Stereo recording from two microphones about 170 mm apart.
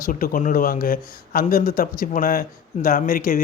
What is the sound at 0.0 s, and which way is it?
A man's voice, 55° left (ahead or behind).